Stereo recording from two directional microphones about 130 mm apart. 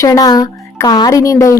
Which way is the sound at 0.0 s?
25° left (ahead or behind).